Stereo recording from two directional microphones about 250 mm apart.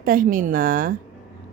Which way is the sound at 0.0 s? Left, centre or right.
Right.